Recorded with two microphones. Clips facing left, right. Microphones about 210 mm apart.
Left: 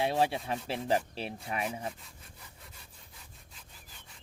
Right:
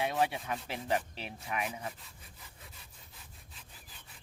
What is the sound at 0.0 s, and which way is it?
Speech, 30° left (ahead or behind).